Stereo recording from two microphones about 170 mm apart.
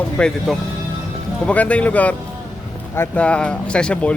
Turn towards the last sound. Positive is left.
turn(degrees=5)  # may be behind; listen again after turning